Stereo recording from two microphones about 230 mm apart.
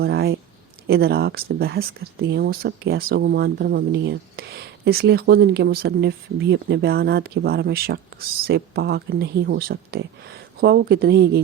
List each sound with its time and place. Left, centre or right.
0.0 s speech: right